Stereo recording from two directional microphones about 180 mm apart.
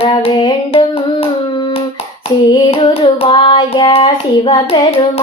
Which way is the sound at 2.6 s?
30° left (ahead or behind).